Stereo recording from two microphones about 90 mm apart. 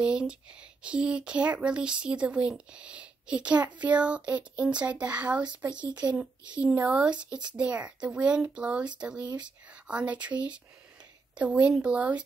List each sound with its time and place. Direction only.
0.0 s speech: 10° right (ahead or behind)